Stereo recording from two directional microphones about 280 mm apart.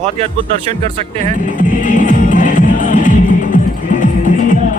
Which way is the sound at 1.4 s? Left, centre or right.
Left.